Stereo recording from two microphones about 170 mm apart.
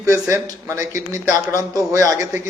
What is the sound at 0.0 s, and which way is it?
A man's voice, 15° right (ahead or behind).